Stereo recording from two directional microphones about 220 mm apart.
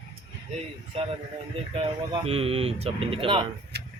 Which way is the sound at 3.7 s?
50° right (ahead or behind).